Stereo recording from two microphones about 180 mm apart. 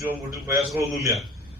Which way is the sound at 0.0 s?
15° right (ahead or behind).